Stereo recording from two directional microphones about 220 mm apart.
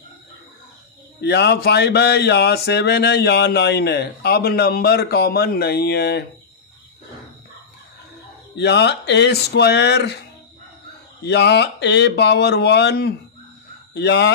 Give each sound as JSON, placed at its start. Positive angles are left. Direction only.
{"t": 1.2, "sound": "speech", "side_deg": 50}
{"t": 8.5, "sound": "speech", "side_deg": 50}